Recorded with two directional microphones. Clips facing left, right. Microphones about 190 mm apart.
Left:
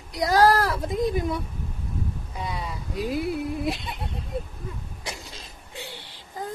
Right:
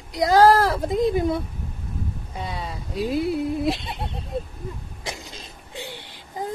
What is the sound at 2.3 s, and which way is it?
Speech, 30° right (ahead or behind).